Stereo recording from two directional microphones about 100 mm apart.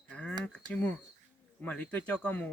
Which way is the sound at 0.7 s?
10° left (ahead or behind).